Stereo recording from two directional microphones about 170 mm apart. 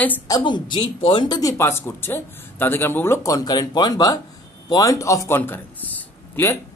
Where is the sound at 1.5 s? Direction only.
15° left (ahead or behind).